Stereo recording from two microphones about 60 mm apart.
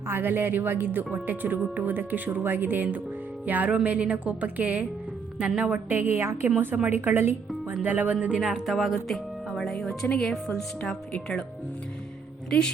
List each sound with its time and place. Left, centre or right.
0.1 s a woman's voice: right
6.2 s a woman's voice: right
6.8 s a woman's voice: right
8.4 s a woman's voice: centre
12.5 s speech: centre